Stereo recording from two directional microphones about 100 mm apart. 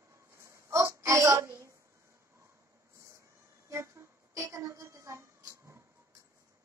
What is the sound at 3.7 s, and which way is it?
Music, 30° right (ahead or behind).